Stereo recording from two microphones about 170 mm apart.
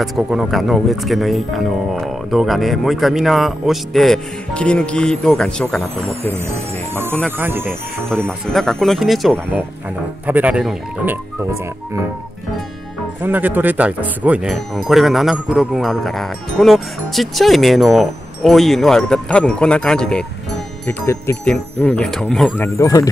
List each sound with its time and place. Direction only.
0.0 s speech: centre (ahead or behind)
6.4 s speech: 15° right (ahead or behind)
8.3 s speech: 5° left (ahead or behind)
13.2 s speech: 10° right (ahead or behind); by 22.7 s 5° left (ahead or behind)
22.8 s speech: 20° left (ahead or behind)